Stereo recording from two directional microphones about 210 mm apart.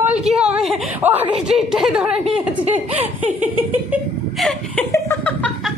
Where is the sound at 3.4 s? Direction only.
5° right (ahead or behind).